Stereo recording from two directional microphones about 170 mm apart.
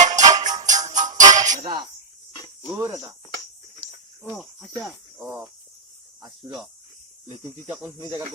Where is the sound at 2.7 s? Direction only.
15° right (ahead or behind).